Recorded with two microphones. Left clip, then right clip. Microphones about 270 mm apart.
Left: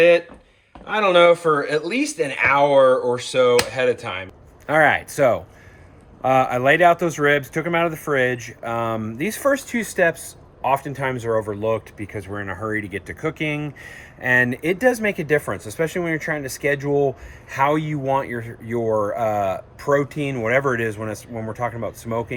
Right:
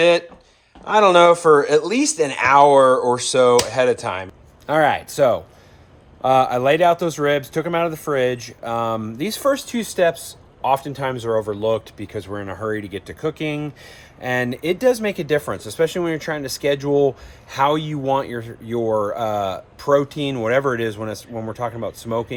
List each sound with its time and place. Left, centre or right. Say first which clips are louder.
0.9 s speech: right 3 dB; centre